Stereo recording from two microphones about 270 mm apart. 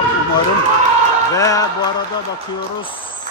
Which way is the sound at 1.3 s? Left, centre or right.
Centre.